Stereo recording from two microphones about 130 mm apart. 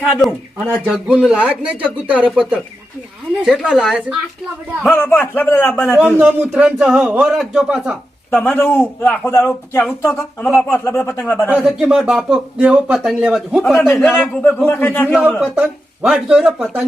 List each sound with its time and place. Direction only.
0.0 s speech: centre (ahead or behind)
4.8 s a man's voice: 10° left (ahead or behind)
6.1 s speech: 15° right (ahead or behind)
8.3 s a man's voice: 15° left (ahead or behind)
10.4 s a man's voice: 5° left (ahead or behind)
10.7 s a man's voice: 20° left (ahead or behind)
11.4 s speech: 10° right (ahead or behind)
13.9 s a man's voice: 15° left (ahead or behind)
15.5 s speech: 10° right (ahead or behind)